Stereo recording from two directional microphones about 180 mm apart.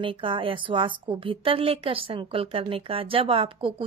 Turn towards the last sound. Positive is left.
turn(degrees=-30)  # may be behind; listen again after turning